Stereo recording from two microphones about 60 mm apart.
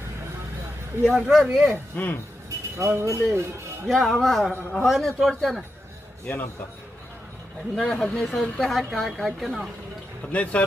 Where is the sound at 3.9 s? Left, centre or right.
Centre.